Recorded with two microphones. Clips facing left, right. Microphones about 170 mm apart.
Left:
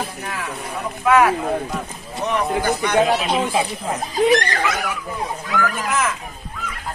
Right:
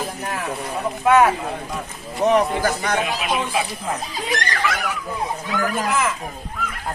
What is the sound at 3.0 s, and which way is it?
Speech, 30° left (ahead or behind).